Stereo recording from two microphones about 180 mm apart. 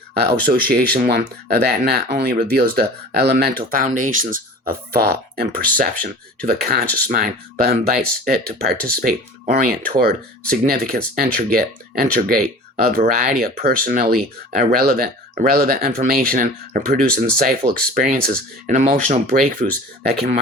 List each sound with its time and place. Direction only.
0.4 s speech: 55° right (ahead or behind)